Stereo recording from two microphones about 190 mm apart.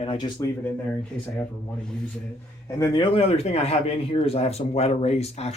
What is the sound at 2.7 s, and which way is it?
Speech, 20° left (ahead or behind).